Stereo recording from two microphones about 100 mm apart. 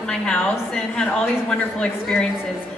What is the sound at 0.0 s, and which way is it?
A woman's voice, 10° left (ahead or behind).